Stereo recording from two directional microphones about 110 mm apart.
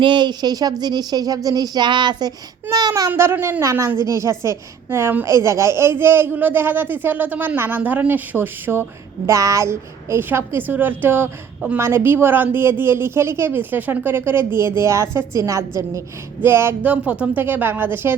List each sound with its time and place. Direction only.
0.0 s speech: 45° right (ahead or behind)
3.1 s a woman's voice: 20° right (ahead or behind)